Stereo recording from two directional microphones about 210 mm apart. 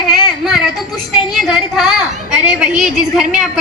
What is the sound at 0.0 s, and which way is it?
Child singing, centre (ahead or behind).